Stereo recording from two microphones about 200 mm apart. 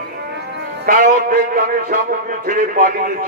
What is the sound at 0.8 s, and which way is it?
A man's voice, 45° right (ahead or behind).